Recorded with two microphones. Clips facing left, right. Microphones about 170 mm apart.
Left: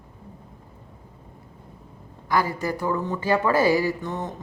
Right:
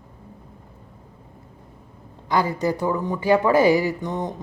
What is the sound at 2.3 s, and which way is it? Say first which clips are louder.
Speech: right 3 dB; 20° right (ahead or behind).